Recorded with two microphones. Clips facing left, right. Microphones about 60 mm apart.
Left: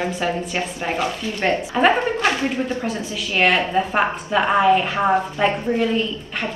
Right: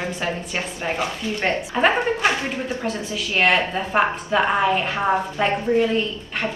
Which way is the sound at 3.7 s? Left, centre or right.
Centre.